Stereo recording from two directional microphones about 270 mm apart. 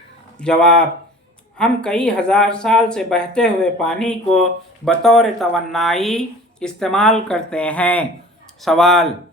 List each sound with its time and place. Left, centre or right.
0.3 s speech: centre